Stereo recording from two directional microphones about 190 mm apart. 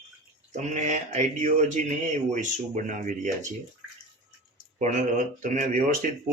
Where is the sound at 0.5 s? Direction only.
40° right (ahead or behind).